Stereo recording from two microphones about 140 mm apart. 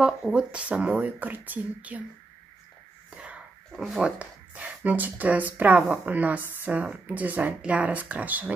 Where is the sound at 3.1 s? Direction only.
10° right (ahead or behind).